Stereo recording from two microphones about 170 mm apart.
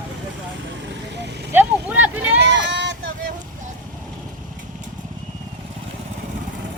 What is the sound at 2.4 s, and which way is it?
Sheep, 90° right.